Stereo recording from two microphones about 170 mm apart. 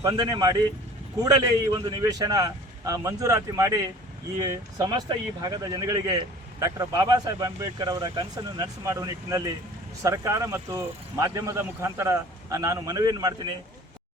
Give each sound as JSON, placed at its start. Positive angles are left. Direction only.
{"t": 0.0, "sound": "speech", "side_deg": -25}